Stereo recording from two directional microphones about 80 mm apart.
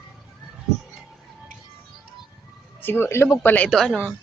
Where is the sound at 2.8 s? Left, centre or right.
Left.